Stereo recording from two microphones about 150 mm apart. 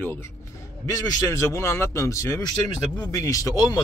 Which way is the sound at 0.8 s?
20° left (ahead or behind).